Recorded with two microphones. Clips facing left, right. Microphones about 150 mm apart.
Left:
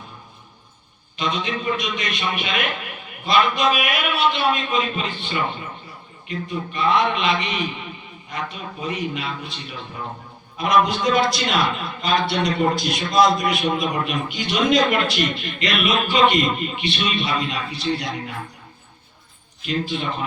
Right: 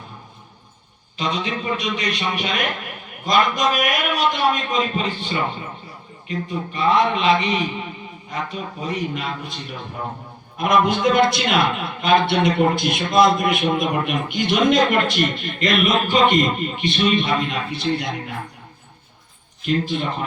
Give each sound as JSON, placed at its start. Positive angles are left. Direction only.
{"t": 1.1, "sound": "a man's voice", "side_deg": -35}
{"t": 10.6, "sound": "a man's voice", "side_deg": -55}